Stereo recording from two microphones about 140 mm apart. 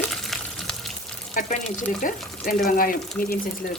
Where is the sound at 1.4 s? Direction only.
80° left.